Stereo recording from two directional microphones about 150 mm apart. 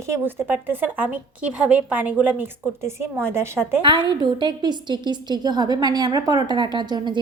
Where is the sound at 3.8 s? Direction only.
30° right (ahead or behind).